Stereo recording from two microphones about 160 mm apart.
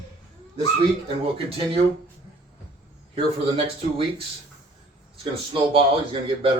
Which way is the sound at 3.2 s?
35° right (ahead or behind).